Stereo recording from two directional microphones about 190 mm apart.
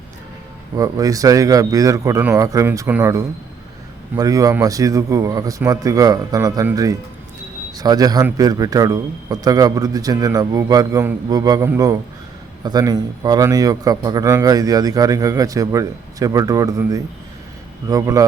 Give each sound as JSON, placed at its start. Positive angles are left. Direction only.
{"t": 0.8, "sound": "a man's voice", "side_deg": -20}